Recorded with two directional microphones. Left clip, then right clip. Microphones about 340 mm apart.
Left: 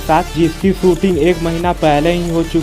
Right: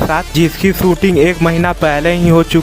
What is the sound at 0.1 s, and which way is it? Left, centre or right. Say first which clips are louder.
Speech: left 1 dB; right.